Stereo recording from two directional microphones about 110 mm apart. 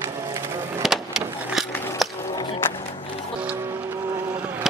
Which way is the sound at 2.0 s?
Centre (ahead or behind).